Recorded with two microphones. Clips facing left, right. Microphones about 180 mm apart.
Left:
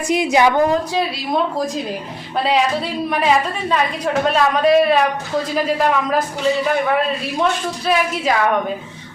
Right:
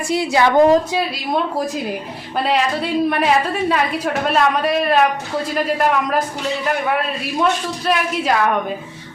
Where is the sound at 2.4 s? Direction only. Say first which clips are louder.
Left 1 dB; centre (ahead or behind).